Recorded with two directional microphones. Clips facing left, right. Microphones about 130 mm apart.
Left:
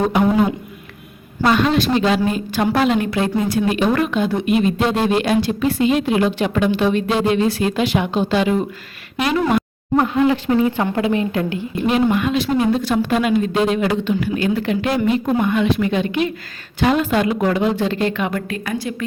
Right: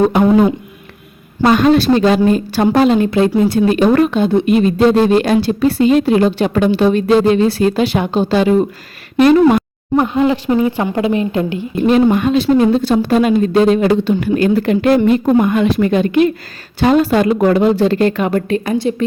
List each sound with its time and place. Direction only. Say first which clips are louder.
1.5 s speech: right 6 dB; 45° right (ahead or behind)
10.0 s a woman's voice: right 2 dB; 20° right (ahead or behind)
11.9 s speech: right 6 dB; 40° right (ahead or behind)